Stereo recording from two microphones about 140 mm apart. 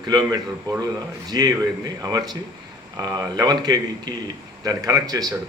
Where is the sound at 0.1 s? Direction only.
30° right (ahead or behind).